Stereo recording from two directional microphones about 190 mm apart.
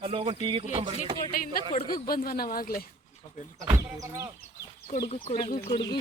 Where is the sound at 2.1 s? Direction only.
50° left (ahead or behind).